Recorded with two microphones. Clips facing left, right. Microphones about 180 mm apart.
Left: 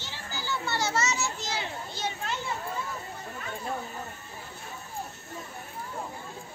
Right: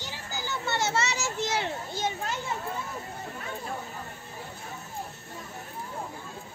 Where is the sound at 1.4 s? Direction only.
55° right (ahead or behind).